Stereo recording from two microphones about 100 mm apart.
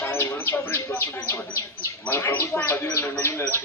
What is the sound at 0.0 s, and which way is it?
Speech, 25° left (ahead or behind).